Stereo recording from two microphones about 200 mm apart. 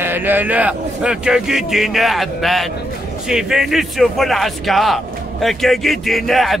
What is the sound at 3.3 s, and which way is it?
Speech, 5° right (ahead or behind).